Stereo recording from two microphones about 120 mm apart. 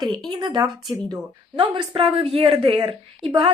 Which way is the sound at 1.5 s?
45° right (ahead or behind).